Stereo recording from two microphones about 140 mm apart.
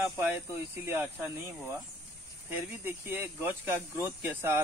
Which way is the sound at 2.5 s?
15° right (ahead or behind).